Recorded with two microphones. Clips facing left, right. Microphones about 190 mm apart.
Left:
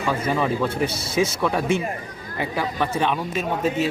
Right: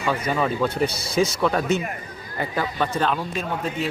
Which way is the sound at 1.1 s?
5° left (ahead or behind).